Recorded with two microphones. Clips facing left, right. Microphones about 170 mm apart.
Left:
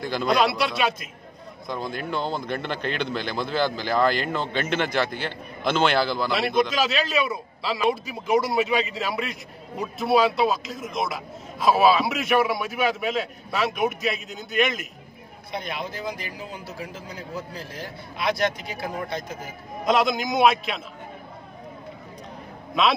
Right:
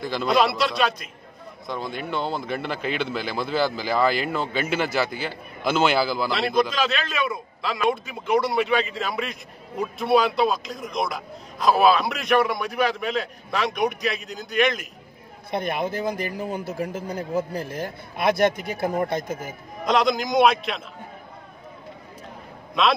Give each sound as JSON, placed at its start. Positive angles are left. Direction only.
{"t": 0.0, "sound": "a man's voice", "side_deg": 0}
{"t": 15.5, "sound": "speech", "side_deg": -55}
{"t": 19.8, "sound": "a man's voice", "side_deg": 0}
{"t": 22.8, "sound": "a man's voice", "side_deg": 0}